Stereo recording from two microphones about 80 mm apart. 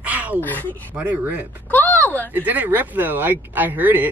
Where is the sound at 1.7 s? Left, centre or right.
Left.